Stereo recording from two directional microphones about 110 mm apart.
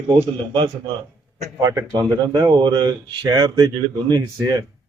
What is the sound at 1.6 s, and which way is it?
Speech, 35° right (ahead or behind).